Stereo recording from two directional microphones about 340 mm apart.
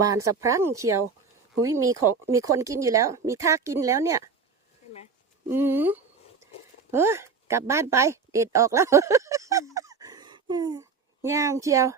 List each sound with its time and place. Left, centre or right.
0.4 s speech: centre
5.5 s a woman's voice: centre